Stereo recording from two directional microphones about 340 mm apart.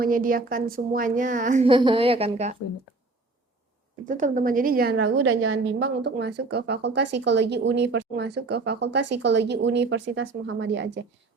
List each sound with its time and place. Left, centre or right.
0.0 s a woman's voice: right
4.0 s a woman's voice: right